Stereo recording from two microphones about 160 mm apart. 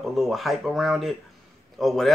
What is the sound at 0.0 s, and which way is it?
Speech, centre (ahead or behind).